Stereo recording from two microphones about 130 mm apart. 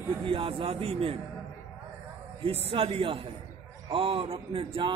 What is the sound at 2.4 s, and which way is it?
A man's voice, 45° right (ahead or behind).